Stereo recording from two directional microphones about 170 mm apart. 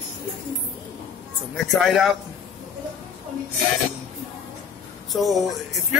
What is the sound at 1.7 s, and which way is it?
Speech, centre (ahead or behind).